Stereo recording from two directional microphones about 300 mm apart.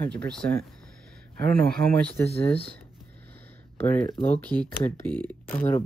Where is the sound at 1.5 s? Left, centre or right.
Right.